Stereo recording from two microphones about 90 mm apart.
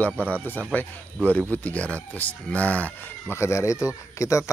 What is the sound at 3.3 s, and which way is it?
Speech, 30° left (ahead or behind).